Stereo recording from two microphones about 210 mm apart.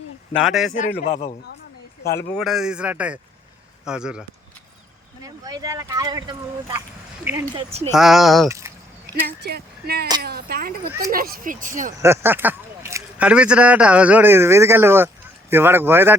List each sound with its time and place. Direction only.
0.3 s speech: centre (ahead or behind)
1.0 s a man's voice: 30° left (ahead or behind)
2.1 s speech: centre (ahead or behind)
5.2 s speech: 15° right (ahead or behind)
7.9 s speech: centre (ahead or behind)
8.4 s speech: 15° right (ahead or behind)
9.2 s speech: 50° right (ahead or behind)
11.9 s speech: 15° right (ahead or behind)